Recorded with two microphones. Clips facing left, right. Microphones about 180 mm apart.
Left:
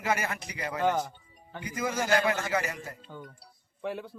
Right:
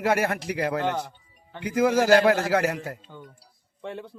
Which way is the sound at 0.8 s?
10° left (ahead or behind).